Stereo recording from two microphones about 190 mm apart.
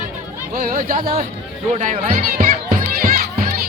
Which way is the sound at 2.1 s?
45° right (ahead or behind).